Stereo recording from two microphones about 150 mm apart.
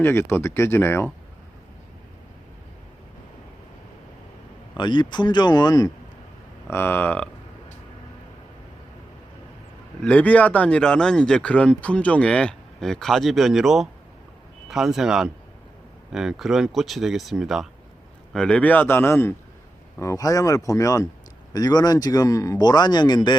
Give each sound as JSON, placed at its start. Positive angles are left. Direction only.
{"t": 0.0, "sound": "speech", "side_deg": 15}
{"t": 4.8, "sound": "speech", "side_deg": 30}
{"t": 6.7, "sound": "speech", "side_deg": 15}
{"t": 10.1, "sound": "speech", "side_deg": 10}